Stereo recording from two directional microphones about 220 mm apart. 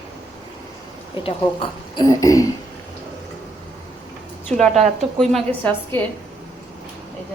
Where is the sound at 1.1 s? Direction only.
25° left (ahead or behind).